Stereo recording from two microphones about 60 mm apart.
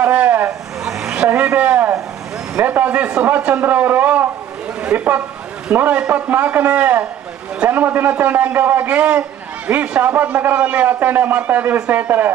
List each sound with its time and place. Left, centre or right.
0.0 s vehicle: right
0.8 s vehicle: centre
1.1 s a sound: right
2.5 s a man's voice: right